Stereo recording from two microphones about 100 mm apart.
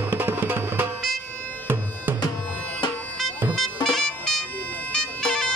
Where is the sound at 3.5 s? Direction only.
5° left (ahead or behind).